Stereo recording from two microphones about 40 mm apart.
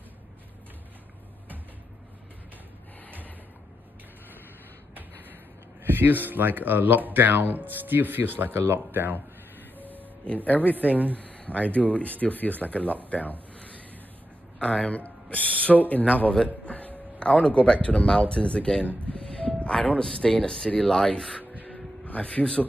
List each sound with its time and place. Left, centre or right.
5.9 s speech: right
9.8 s music: right
10.2 s a man's voice: left
10.8 s speech: right
11.1 s a sound: left
11.7 s speech: left
14.6 s speech: left
16.6 s a sound: left
17.2 s speech: left
19.2 s music: left
20.0 s speech: centre
22.0 s speech: left